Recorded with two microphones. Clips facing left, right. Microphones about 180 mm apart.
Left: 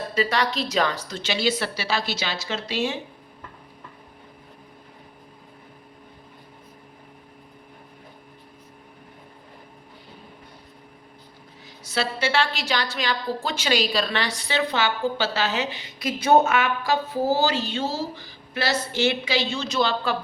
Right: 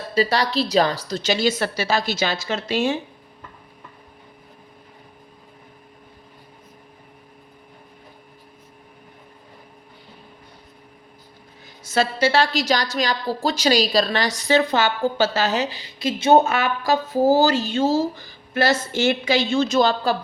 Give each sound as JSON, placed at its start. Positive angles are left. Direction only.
{"t": 0.1, "sound": "a woman's voice", "side_deg": -35}
{"t": 11.8, "sound": "a woman's voice", "side_deg": -45}